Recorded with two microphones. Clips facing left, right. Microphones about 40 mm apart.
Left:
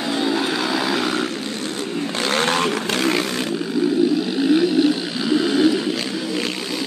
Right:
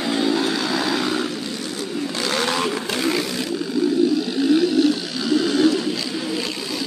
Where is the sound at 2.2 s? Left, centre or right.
Left.